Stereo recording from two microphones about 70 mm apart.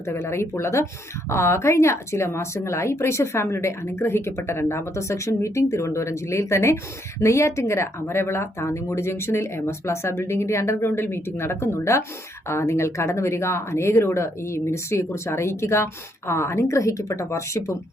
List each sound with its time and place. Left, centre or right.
0.0 s a woman's voice: left